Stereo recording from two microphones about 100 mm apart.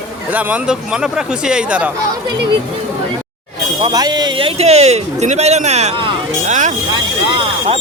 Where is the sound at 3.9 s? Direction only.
45° right (ahead or behind); by 6.1 s 75° right (ahead or behind).